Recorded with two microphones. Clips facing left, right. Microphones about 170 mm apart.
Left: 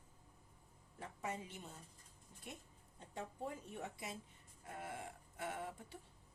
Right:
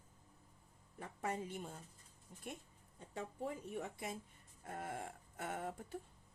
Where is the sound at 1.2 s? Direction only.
55° right (ahead or behind).